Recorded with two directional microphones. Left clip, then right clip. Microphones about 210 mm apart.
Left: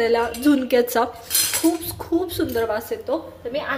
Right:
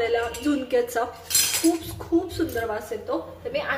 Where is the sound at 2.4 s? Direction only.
40° left (ahead or behind).